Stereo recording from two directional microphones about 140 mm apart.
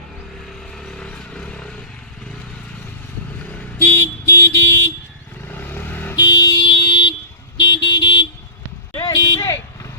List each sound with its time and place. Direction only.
0.9 s vehicle: 5° left (ahead or behind)
3.8 s vehicle: 15° left (ahead or behind)
6.1 s car alarm: 25° left (ahead or behind)
7.8 s vehicle: 35° left (ahead or behind)
9.0 s a sound: 25° left (ahead or behind)